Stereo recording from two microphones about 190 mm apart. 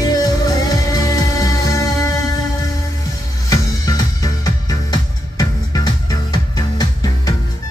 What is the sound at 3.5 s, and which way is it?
Music, 20° left (ahead or behind).